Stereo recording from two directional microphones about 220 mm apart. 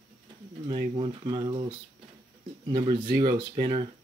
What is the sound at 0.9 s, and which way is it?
Speech, 20° right (ahead or behind).